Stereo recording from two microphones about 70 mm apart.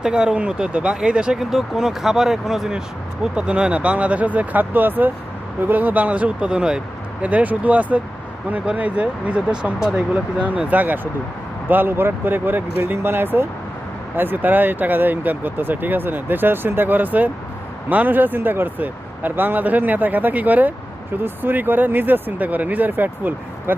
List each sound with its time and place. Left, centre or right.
0.0 s speech: centre; by 23.7 s right